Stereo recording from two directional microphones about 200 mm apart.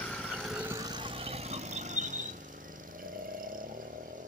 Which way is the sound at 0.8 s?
25° right (ahead or behind).